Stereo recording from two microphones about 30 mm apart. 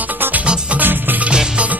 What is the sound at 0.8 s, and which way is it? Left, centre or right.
Music, right.